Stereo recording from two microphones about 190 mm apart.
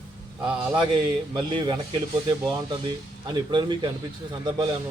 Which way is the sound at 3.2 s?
25° right (ahead or behind).